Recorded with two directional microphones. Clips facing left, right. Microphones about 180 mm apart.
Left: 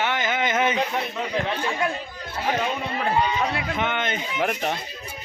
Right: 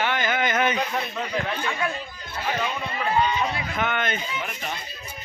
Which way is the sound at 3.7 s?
25° left (ahead or behind).